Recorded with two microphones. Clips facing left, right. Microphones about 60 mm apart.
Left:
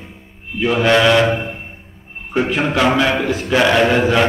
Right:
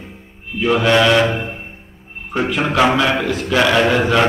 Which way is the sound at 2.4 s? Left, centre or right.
Left.